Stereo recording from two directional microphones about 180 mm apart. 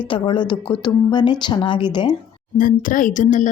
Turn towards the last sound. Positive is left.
turn(degrees=45)  # may be behind; listen again after turning